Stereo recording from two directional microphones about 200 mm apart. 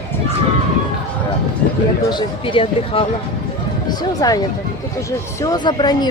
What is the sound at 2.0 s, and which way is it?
Speech, 25° left (ahead or behind).